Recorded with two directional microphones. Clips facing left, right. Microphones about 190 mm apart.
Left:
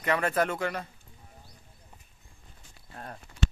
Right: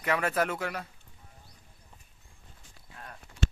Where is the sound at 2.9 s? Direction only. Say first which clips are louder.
Left 5 dB; 35° left (ahead or behind).